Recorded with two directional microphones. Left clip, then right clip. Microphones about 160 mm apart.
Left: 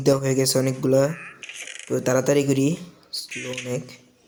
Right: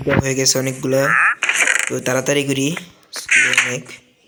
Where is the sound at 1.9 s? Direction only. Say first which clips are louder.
Right 2 dB; 10° left (ahead or behind).